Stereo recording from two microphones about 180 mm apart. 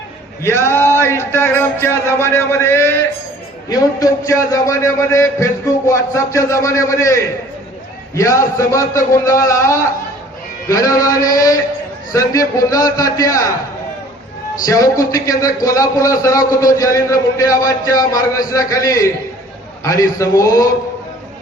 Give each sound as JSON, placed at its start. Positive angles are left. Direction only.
{"t": 0.4, "sound": "a man's voice", "side_deg": 15}
{"t": 14.6, "sound": "a man's voice", "side_deg": 20}